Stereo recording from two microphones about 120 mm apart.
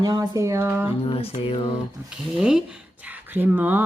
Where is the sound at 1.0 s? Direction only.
55° left (ahead or behind).